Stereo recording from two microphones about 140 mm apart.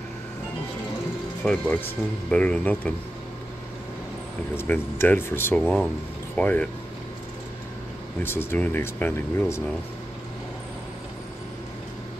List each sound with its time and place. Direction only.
1.4 s speech: 10° left (ahead or behind)
4.6 s speech: 15° left (ahead or behind)
5.6 s speech: centre (ahead or behind)
6.3 s speech: 10° left (ahead or behind)
8.2 s speech: 15° left (ahead or behind)